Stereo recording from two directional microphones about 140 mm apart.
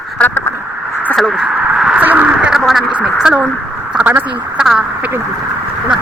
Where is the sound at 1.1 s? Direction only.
5° right (ahead or behind).